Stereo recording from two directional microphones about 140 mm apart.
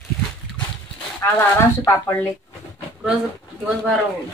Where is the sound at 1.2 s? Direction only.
20° left (ahead or behind).